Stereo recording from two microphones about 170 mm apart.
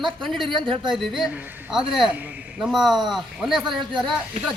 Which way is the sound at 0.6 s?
25° right (ahead or behind).